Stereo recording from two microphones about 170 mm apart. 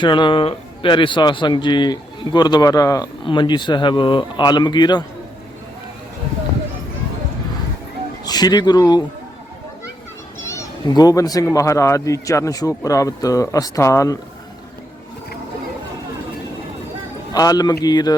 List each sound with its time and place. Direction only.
0.0 s speech: 30° left (ahead or behind)
8.2 s speech: 25° left (ahead or behind)
10.4 s speech: 20° left (ahead or behind)
17.3 s speech: 20° left (ahead or behind)